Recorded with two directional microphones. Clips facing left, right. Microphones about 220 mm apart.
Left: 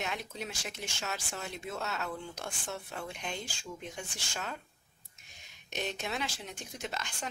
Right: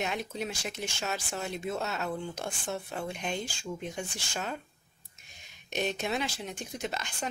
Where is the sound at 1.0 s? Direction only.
20° right (ahead or behind).